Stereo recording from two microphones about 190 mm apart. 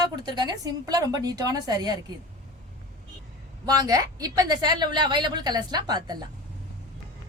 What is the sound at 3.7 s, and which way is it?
A woman's voice, 20° right (ahead or behind).